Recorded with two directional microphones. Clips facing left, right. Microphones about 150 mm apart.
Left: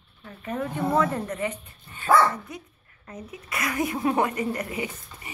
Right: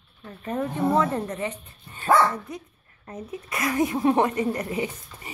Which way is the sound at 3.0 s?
30° right (ahead or behind).